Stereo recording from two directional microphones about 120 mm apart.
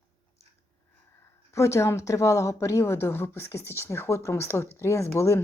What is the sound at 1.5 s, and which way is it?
A woman's voice, 25° left (ahead or behind).